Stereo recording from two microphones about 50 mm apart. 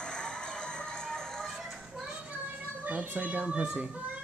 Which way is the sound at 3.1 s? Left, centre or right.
Right.